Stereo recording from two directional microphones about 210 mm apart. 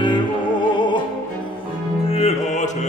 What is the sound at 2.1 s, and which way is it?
Music, 30° left (ahead or behind).